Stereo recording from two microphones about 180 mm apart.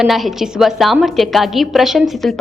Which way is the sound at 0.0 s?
Centre (ahead or behind).